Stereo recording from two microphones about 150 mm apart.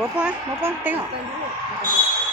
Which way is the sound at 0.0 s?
10° right (ahead or behind).